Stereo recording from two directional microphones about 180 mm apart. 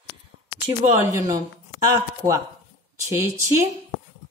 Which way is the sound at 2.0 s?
20° right (ahead or behind).